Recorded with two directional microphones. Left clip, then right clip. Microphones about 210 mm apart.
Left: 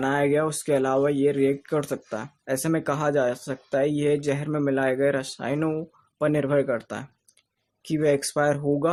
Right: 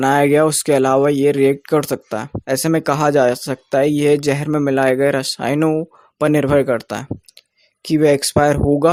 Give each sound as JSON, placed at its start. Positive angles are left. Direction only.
{"t": 0.0, "sound": "speech", "side_deg": -45}